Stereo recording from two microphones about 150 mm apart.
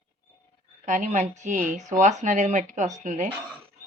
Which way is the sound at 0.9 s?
55° right (ahead or behind).